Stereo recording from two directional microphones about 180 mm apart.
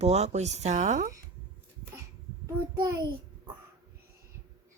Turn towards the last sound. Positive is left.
turn(degrees=-15)  # may be behind; listen again after turning